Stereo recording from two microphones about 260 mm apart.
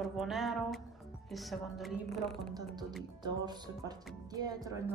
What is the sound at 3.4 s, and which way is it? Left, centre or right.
Speech, centre.